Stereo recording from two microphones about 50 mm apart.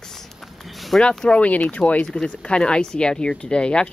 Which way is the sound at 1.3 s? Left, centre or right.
Left.